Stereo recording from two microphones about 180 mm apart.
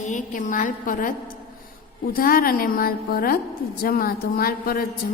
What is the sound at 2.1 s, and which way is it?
A woman's voice, 55° left (ahead or behind).